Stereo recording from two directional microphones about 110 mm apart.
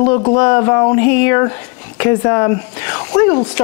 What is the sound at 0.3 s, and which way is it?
Speech, 25° left (ahead or behind).